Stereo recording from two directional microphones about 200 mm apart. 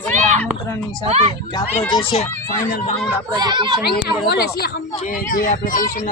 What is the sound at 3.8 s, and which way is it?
Speech, 50° left (ahead or behind).